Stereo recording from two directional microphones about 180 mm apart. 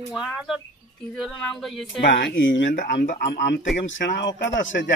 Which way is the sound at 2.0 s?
70° left (ahead or behind).